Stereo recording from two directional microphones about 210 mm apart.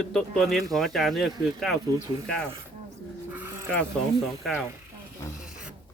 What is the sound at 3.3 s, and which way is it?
Dog, 10° right (ahead or behind).